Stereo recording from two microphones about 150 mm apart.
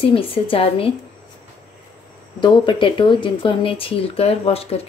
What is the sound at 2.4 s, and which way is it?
Speech, 30° left (ahead or behind).